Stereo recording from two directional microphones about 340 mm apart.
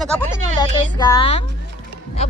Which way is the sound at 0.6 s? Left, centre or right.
Centre.